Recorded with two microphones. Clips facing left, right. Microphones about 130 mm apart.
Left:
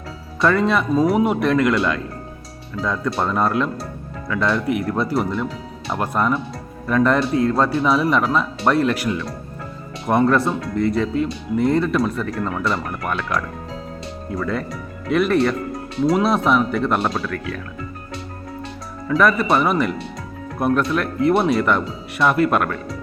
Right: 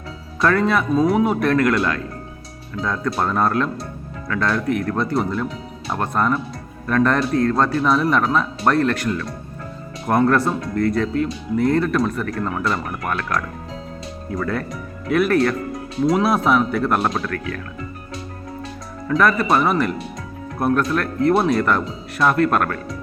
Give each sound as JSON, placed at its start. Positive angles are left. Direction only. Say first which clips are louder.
{"t": 0.4, "sound": "a man's voice", "louder": "even", "side_deg": 0}
{"t": 2.8, "sound": "a man's voice", "louder": "even", "side_deg": 0}
{"t": 12.5, "sound": "speech", "louder": "even", "side_deg": -15}
{"t": 14.3, "sound": "a man's voice", "louder": "even", "side_deg": 0}
{"t": 17.2, "sound": "speech", "louder": "even", "side_deg": 5}
{"t": 19.0, "sound": "a man's voice", "louder": "left 1 dB", "side_deg": 0}